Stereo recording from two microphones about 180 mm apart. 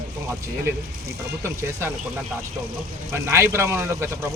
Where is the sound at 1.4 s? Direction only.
15° right (ahead or behind).